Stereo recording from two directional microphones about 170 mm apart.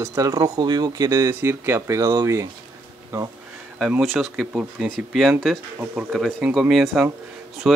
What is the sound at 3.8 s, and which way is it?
Speech, centre (ahead or behind).